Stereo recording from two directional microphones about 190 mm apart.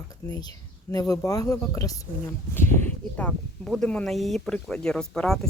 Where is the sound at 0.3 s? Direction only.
20° left (ahead or behind).